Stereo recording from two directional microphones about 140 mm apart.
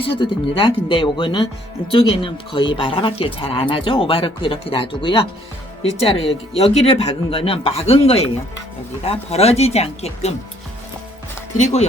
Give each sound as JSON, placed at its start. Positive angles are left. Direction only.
{"t": 0.0, "sound": "speech", "side_deg": 40}
{"t": 11.5, "sound": "speech", "side_deg": 55}